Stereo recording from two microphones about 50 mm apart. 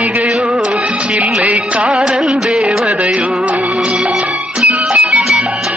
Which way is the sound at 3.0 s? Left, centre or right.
Right.